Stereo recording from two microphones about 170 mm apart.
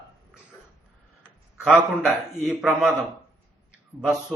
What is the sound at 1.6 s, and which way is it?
A man's voice, 5° right (ahead or behind).